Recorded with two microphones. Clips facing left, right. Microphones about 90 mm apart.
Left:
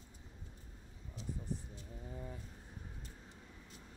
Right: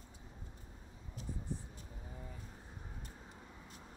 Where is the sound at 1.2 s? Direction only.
45° right (ahead or behind).